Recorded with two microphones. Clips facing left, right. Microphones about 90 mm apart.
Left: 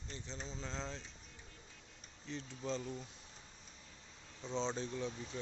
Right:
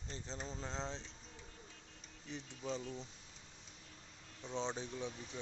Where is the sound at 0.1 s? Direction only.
30° right (ahead or behind).